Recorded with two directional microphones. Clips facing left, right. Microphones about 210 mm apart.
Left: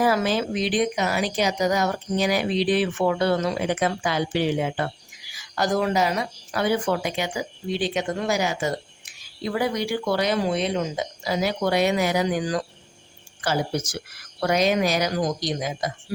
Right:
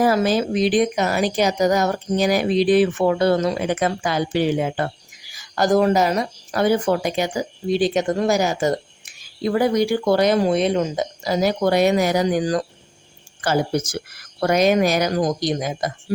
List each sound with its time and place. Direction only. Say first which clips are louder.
0.0 s speech: right 4 dB; 40° right (ahead or behind)